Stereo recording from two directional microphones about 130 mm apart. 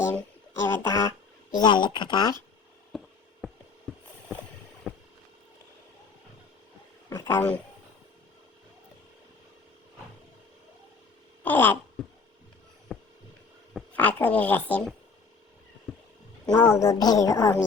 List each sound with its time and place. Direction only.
0.6 s a woman's voice: 20° left (ahead or behind)
1.5 s speech: 35° left (ahead or behind)
2.9 s a sound: centre (ahead or behind)
4.9 s vehicle: 5° left (ahead or behind)
7.1 s speech: 20° left (ahead or behind)
11.4 s speech: 15° left (ahead or behind)
12.0 s a sound: centre (ahead or behind)
12.9 s hum: centre (ahead or behind)
13.9 s speech: 10° left (ahead or behind)
15.9 s a sound: centre (ahead or behind)
16.5 s a woman's voice: 20° left (ahead or behind)